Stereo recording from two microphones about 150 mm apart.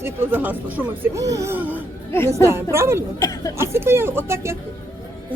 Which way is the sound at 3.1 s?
25° left (ahead or behind).